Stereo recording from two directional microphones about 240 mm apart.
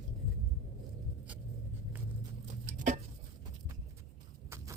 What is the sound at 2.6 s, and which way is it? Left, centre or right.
Chopping, right.